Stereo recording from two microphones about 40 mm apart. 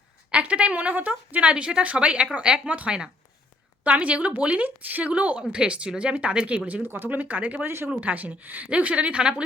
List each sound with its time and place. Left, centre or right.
0.3 s a woman's voice: right
3.8 s a woman's voice: right
5.4 s speech: right
6.9 s speech: right
7.6 s speech: right
8.0 s speech: right
8.6 s a woman's voice: right